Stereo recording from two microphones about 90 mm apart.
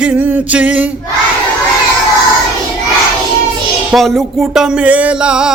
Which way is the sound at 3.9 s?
Centre (ahead or behind).